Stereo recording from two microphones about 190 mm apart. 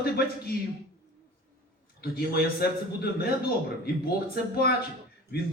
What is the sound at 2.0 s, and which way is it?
A man's voice, 55° left (ahead or behind).